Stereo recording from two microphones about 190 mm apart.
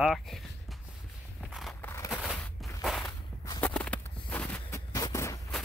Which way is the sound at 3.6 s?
5° left (ahead or behind).